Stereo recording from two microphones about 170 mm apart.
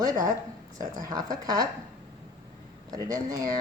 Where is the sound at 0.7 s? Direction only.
50° right (ahead or behind).